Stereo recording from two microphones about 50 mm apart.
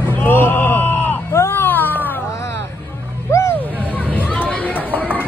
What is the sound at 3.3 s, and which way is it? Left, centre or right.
Music, left.